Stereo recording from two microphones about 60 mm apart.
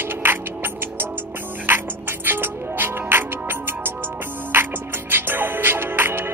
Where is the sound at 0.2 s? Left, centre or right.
Right.